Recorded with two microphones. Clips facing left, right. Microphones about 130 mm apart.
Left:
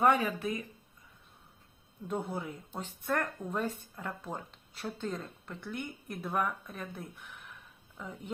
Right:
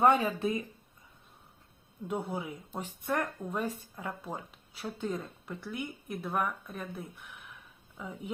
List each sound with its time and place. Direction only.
0.0 s speech: 25° right (ahead or behind)
2.0 s a woman's voice: 10° right (ahead or behind)